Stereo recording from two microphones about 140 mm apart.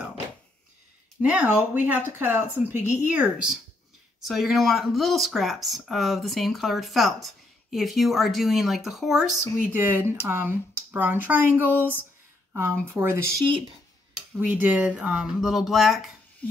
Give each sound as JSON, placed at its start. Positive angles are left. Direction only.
{"t": 1.2, "sound": "speech", "side_deg": -10}
{"t": 9.6, "sound": "speech", "side_deg": -15}
{"t": 14.4, "sound": "speech", "side_deg": -10}